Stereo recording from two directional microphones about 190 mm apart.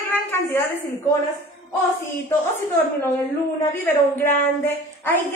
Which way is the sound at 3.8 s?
10° left (ahead or behind).